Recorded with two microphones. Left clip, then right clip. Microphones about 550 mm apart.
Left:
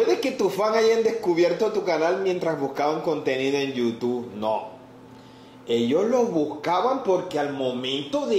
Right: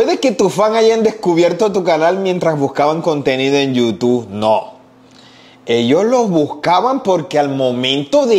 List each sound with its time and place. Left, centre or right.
0.0 s speech: right
5.7 s speech: right